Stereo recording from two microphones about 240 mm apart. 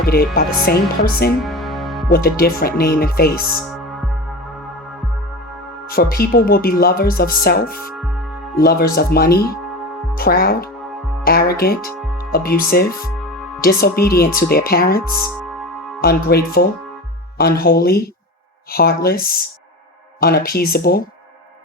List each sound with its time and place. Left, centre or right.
0.0 s speech: left
1.5 s music: centre
2.0 s speech: left
5.9 s speech: left